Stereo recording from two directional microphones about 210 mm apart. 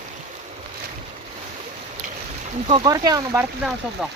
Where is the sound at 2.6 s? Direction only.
25° right (ahead or behind).